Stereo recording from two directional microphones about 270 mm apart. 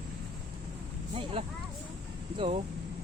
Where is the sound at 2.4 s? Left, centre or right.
Right.